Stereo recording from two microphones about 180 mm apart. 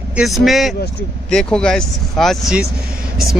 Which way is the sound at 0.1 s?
Centre (ahead or behind).